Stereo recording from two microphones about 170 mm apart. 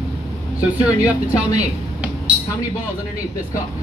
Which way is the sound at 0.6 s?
10° right (ahead or behind).